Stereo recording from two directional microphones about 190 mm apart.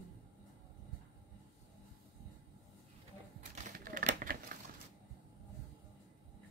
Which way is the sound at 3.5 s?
45° right (ahead or behind).